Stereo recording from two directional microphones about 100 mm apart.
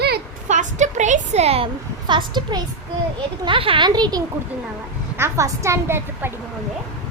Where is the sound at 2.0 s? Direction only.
50° right (ahead or behind).